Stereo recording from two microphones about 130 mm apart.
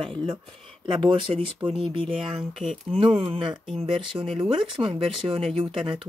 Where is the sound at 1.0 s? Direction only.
40° right (ahead or behind).